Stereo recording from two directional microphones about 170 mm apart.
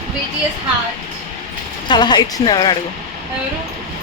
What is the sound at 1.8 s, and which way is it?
Speech, 25° left (ahead or behind).